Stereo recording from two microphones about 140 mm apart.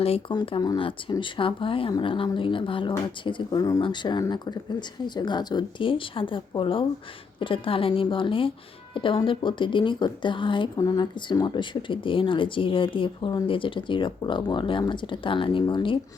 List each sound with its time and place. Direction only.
0.0 s speech: 45° left (ahead or behind)